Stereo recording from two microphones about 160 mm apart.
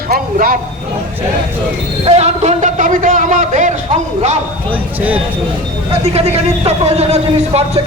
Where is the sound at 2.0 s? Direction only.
40° right (ahead or behind).